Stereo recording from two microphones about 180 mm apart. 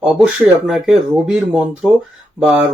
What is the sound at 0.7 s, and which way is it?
Speech, centre (ahead or behind).